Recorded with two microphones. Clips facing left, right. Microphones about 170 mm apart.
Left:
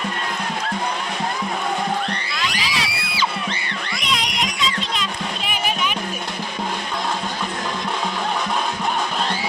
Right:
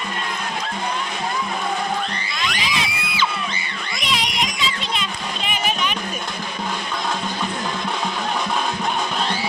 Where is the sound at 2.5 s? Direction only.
35° left (ahead or behind).